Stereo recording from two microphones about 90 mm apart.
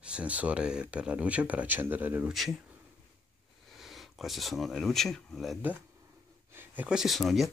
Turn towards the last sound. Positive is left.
turn(degrees=0)  # may be behind; listen again after turning